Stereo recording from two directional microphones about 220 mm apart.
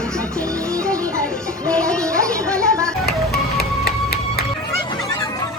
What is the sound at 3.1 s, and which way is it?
Music, 45° left (ahead or behind).